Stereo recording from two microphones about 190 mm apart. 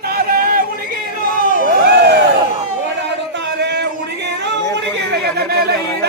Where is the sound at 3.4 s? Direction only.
65° right (ahead or behind).